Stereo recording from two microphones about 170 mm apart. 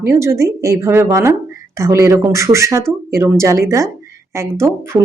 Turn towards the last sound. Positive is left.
turn(degrees=-15)  # may be behind; listen again after turning